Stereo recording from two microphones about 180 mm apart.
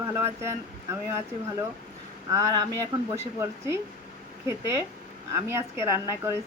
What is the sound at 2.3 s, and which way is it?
Speech, 20° right (ahead or behind).